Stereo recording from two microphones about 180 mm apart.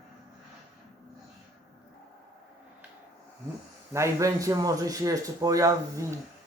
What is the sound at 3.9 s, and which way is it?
Speech, 15° right (ahead or behind).